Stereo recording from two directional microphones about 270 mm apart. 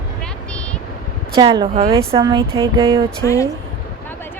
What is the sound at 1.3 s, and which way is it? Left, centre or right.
A woman's voice, centre.